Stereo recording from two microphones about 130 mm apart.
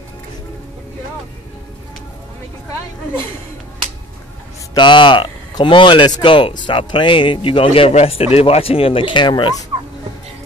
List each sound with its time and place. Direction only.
4.7 s speech: 40° left (ahead or behind)